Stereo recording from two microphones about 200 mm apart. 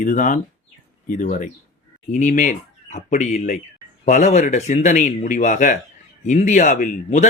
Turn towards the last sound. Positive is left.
turn(degrees=35)  # may be behind; listen again after turning